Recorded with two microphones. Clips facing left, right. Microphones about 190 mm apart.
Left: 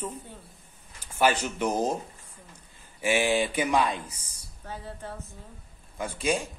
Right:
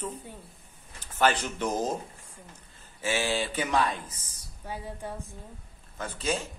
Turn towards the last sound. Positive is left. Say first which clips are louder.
# left 3 dB
turn(degrees=15)  # may be behind; listen again after turning